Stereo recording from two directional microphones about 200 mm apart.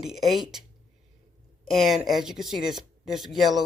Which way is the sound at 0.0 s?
Centre (ahead or behind).